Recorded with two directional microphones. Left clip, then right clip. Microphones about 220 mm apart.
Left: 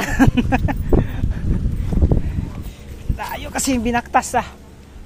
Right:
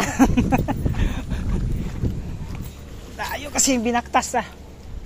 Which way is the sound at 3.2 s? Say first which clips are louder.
Right 1 dB; 10° left (ahead or behind).